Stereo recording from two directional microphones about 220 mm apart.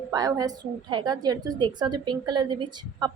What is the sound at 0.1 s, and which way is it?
A woman's voice, 15° right (ahead or behind).